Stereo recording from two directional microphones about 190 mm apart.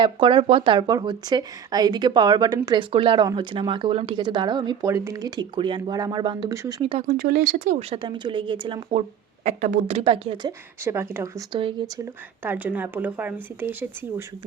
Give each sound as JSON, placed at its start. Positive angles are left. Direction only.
{"t": 0.0, "sound": "speech", "side_deg": -25}
{"t": 7.1, "sound": "speech", "side_deg": -50}
{"t": 10.8, "sound": "speech", "side_deg": -15}
{"t": 12.4, "sound": "speech", "side_deg": -10}